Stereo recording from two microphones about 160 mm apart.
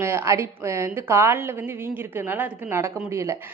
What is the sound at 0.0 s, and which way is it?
A woman's voice, 15° right (ahead or behind).